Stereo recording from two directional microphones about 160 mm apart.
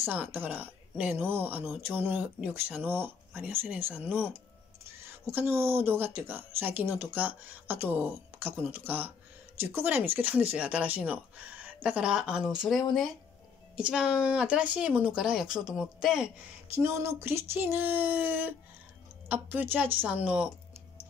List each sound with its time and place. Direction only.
0.0 s speech: 10° right (ahead or behind)
16.7 s speech: 15° right (ahead or behind)